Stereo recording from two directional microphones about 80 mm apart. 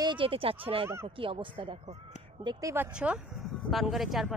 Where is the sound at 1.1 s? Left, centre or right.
Right.